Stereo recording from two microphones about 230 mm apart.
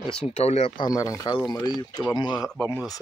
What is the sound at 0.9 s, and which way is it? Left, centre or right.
Speech, centre.